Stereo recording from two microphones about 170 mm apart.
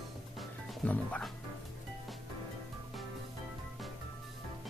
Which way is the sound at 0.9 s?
10° left (ahead or behind).